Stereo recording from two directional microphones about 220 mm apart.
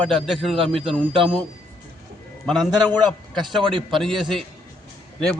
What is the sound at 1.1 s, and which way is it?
Speech, 20° right (ahead or behind).